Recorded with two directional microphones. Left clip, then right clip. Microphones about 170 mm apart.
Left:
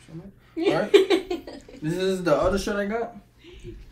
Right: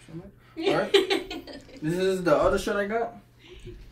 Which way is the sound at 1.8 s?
5° right (ahead or behind).